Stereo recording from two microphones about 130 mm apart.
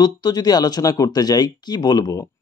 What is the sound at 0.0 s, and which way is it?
Speech, 30° left (ahead or behind).